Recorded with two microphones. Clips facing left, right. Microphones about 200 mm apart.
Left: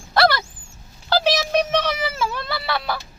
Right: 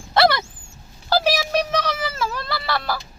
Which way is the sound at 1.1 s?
10° right (ahead or behind).